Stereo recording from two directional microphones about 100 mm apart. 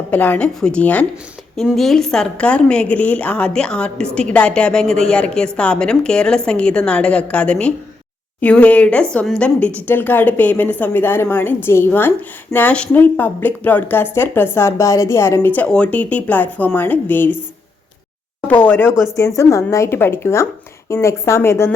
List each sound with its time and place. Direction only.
0.1 s a woman's voice: 15° left (ahead or behind)
1.5 s a woman's voice: 5° left (ahead or behind); by 15.4 s 30° left (ahead or behind)
15.4 s a woman's voice: 15° left (ahead or behind)
18.4 s a woman's voice: 20° left (ahead or behind)
19.4 s a woman's voice: 30° left (ahead or behind)